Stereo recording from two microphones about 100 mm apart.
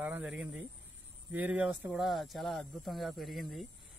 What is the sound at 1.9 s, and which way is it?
A man's voice, centre (ahead or behind).